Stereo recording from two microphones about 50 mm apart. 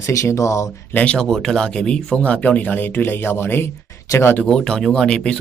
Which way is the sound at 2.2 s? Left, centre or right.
Left.